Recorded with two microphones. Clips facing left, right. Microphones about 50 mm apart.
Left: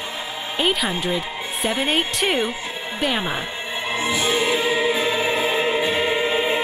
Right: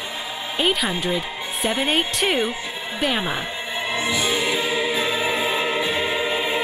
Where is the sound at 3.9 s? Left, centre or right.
Left.